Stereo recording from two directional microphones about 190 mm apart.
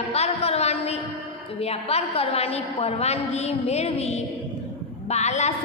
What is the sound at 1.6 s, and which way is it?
A woman's voice, 30° left (ahead or behind).